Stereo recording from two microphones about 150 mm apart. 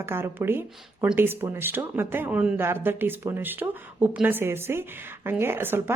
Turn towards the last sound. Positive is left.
turn(degrees=-15)  # may be behind; listen again after turning